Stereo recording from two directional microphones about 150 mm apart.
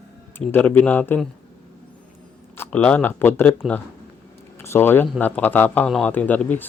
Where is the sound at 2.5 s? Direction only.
10° left (ahead or behind).